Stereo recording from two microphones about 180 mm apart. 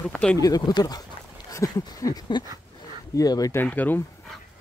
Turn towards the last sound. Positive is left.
turn(degrees=10)  # may be behind; listen again after turning